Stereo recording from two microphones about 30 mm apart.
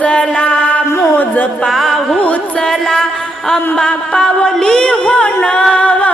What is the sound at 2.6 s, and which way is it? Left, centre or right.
Music, centre.